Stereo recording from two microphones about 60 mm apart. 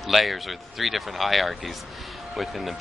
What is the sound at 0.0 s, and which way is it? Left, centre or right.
Speech, centre.